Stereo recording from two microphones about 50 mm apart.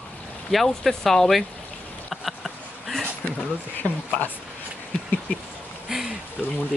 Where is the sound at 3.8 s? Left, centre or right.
Left.